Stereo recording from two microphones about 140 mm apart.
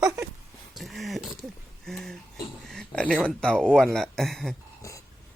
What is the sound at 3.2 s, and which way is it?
Speech, 5° left (ahead or behind).